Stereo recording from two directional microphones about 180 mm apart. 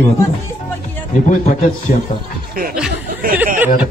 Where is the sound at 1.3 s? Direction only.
45° left (ahead or behind).